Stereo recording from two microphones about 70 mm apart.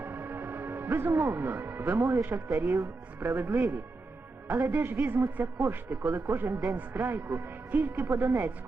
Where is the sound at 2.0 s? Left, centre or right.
Right.